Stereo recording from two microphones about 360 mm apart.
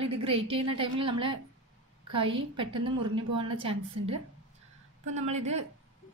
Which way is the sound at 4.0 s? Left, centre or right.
Right.